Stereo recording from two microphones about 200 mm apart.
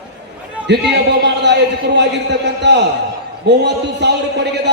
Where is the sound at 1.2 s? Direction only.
60° right (ahead or behind).